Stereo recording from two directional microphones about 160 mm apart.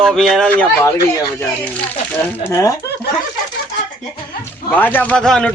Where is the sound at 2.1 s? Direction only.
15° left (ahead or behind).